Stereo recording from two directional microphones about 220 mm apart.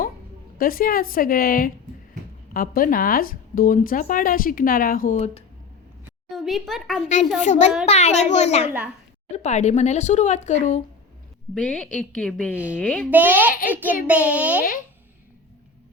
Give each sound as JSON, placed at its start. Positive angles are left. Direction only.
{"t": 0.6, "sound": "speech", "side_deg": 40}
{"t": 6.3, "sound": "a woman's voice", "side_deg": 0}
{"t": 7.3, "sound": "speech", "side_deg": 30}
{"t": 11.5, "sound": "a woman's voice", "side_deg": 5}
{"t": 13.1, "sound": "a child's voice", "side_deg": -10}